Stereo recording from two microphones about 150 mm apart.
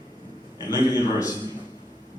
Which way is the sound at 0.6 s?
25° left (ahead or behind).